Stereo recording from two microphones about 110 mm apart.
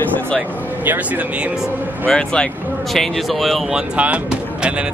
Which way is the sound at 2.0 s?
10° left (ahead or behind).